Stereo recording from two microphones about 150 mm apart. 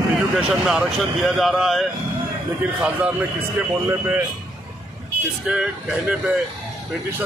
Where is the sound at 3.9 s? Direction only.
10° right (ahead or behind).